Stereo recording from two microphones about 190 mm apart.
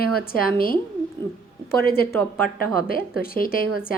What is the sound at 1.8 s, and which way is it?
Speech, 55° left (ahead or behind).